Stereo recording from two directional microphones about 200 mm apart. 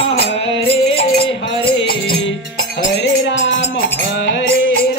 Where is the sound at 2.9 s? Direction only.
65° left (ahead or behind).